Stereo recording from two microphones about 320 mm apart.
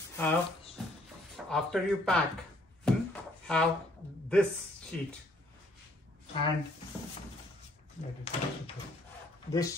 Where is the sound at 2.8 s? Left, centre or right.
Centre.